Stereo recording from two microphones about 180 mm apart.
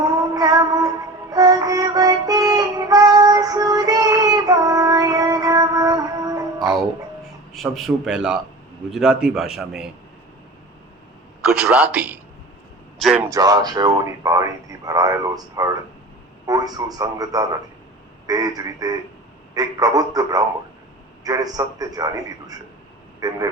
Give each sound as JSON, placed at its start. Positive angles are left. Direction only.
{"t": 0.0, "sound": "music", "side_deg": -20}
{"t": 7.5, "sound": "a man's voice", "side_deg": 0}
{"t": 11.4, "sound": "a man's voice", "side_deg": -5}
{"t": 13.3, "sound": "speech", "side_deg": -20}